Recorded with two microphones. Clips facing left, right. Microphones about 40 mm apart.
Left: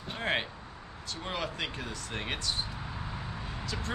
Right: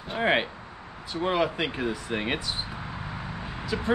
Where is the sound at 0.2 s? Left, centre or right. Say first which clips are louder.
Right 8 dB; centre.